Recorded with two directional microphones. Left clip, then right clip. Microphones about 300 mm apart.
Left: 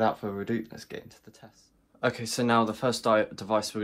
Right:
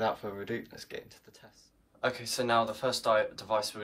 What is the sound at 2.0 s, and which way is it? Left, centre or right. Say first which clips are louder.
Speech: left 3 dB; left.